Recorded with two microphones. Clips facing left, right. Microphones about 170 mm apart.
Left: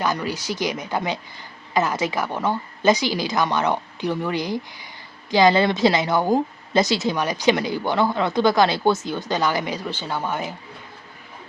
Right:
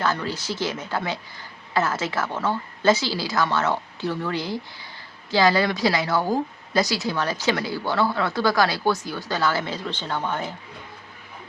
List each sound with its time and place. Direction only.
0.0 s a woman's voice: 15° left (ahead or behind)